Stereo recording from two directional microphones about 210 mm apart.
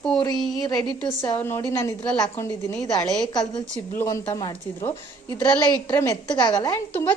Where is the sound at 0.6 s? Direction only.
20° left (ahead or behind).